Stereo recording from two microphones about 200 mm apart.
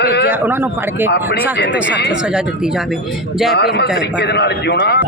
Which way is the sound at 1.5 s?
60° left (ahead or behind).